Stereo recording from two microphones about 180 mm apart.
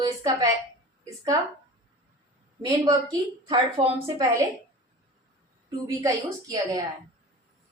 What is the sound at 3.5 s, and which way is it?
Speech, 25° right (ahead or behind).